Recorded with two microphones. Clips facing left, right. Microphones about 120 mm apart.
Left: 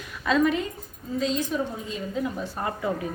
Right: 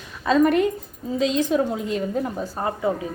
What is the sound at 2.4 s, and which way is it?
Speech, 25° right (ahead or behind).